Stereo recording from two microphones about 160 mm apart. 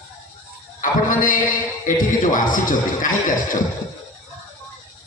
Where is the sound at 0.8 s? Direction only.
55° left (ahead or behind).